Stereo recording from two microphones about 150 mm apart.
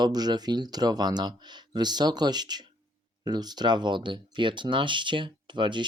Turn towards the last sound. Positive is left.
turn(degrees=-30)  # may be behind; listen again after turning